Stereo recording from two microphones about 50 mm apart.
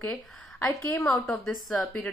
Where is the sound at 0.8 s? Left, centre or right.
Left.